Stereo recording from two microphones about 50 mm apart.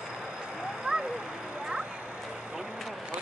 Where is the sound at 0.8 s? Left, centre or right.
Centre.